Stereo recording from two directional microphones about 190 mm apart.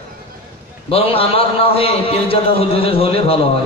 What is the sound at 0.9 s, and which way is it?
A man's voice, 30° left (ahead or behind).